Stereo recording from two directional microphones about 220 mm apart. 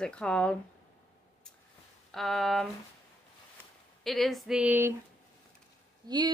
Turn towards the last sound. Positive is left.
turn(degrees=-20)  # may be behind; listen again after turning